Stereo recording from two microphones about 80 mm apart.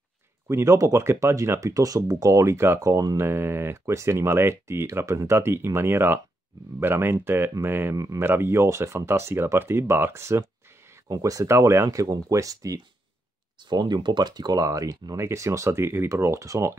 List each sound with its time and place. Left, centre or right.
0.5 s speech: right
7.9 s speech: right
8.2 s speech: right
11.1 s speech: right
13.6 s speech: right